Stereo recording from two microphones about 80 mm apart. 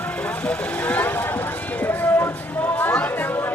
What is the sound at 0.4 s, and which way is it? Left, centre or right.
Vehicle, centre.